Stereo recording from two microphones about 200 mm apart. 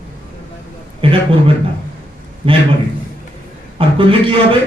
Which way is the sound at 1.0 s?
25° right (ahead or behind).